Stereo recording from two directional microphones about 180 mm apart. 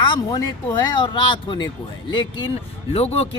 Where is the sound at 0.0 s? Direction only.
25° left (ahead or behind).